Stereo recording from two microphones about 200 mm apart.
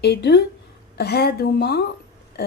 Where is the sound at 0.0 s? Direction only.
55° left (ahead or behind).